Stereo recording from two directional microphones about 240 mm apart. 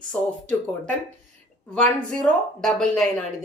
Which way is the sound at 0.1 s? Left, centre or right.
Centre.